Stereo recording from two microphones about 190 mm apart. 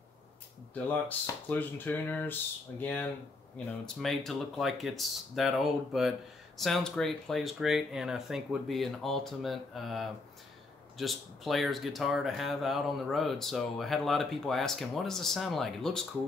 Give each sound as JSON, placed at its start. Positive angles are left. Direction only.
{"t": 1.0, "sound": "speech", "side_deg": 10}